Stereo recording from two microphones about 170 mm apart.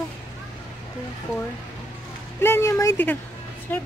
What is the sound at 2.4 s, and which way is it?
Speech, 15° left (ahead or behind).